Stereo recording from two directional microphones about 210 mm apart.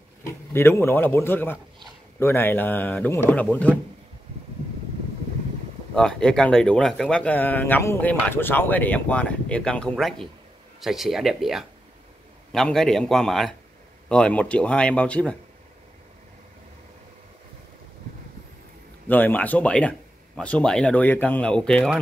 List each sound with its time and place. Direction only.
0.2 s a man's voice: 10° left (ahead or behind)
5.9 s speech: 5° left (ahead or behind)
19.0 s speech: 10° left (ahead or behind)